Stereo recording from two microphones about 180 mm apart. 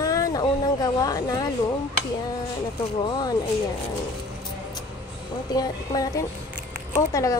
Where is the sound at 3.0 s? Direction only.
20° left (ahead or behind).